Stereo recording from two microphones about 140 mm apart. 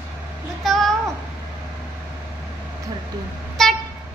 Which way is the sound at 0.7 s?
Centre (ahead or behind).